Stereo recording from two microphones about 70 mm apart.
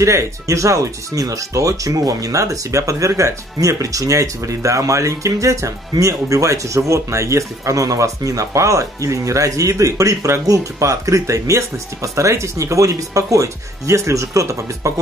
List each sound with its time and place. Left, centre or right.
0.0 s speech: right